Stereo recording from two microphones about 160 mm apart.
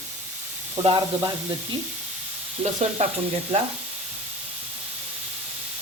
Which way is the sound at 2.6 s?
45° right (ahead or behind).